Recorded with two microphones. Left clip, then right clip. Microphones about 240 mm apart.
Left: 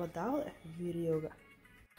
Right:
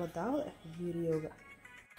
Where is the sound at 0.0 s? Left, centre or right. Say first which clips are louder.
Even; centre.